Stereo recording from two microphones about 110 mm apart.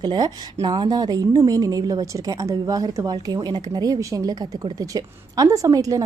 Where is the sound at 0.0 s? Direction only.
40° right (ahead or behind).